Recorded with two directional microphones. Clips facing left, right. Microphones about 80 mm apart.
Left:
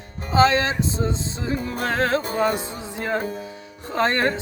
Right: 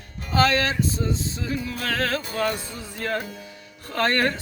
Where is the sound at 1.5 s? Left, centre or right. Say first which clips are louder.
Left 4 dB; left.